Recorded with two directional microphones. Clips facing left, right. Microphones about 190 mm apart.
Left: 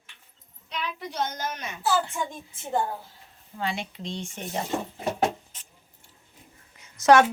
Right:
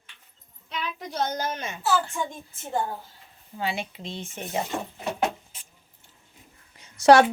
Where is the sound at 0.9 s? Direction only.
40° right (ahead or behind).